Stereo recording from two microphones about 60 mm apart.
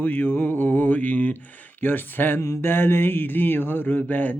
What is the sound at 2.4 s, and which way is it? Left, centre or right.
Mantra, left.